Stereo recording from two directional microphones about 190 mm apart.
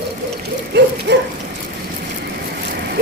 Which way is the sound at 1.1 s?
65° right (ahead or behind).